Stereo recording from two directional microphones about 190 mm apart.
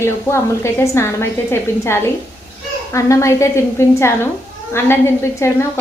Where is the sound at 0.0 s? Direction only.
15° left (ahead or behind).